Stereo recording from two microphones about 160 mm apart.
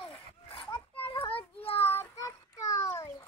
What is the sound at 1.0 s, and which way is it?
Children playing, 35° left (ahead or behind).